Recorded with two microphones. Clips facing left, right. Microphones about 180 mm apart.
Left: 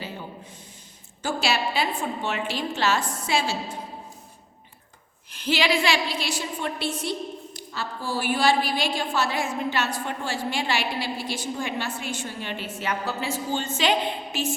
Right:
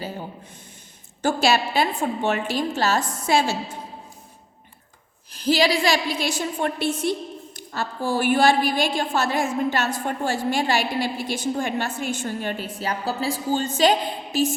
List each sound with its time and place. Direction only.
1.2 s a woman's voice: 45° right (ahead or behind)
5.3 s a woman's voice: 35° right (ahead or behind)